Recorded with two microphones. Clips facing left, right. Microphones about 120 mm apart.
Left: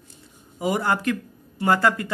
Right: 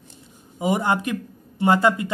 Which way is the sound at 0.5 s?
20° right (ahead or behind).